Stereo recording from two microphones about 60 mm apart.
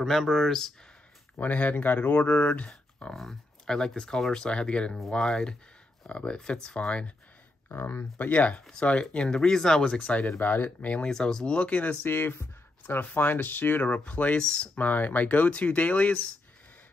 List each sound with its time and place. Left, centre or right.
0.0 s speech: centre
1.3 s speech: left
2.7 s speech: centre
7.7 s speech: left
8.3 s speech: left
10.2 s speech: left
11.0 s speech: centre
12.0 s speech: left; by 14.7 s centre
14.8 s speech: left